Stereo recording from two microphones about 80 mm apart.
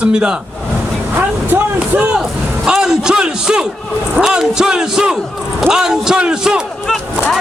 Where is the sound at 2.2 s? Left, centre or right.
Centre.